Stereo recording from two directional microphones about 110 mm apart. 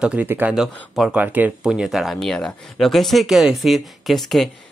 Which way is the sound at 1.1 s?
15° right (ahead or behind).